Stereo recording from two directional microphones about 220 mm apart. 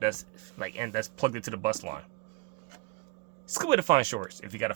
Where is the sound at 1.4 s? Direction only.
50° right (ahead or behind).